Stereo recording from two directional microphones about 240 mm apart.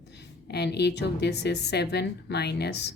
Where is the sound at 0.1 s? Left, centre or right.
Left.